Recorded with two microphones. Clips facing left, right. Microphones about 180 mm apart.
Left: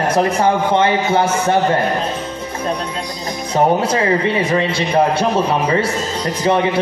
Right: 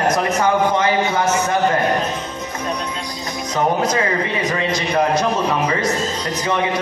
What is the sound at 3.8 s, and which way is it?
A man's voice, 30° left (ahead or behind).